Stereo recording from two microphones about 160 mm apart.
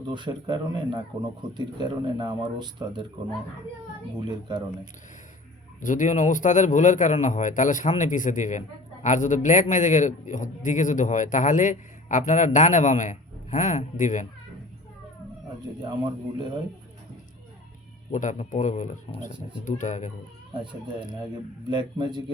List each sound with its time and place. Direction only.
0.1 s speech: 30° right (ahead or behind)
4.3 s speech: 30° right (ahead or behind)
5.8 s a man's voice: 50° left (ahead or behind)
15.8 s speech: 30° right (ahead or behind)
18.1 s a man's voice: 50° left (ahead or behind)
21.7 s speech: 30° right (ahead or behind)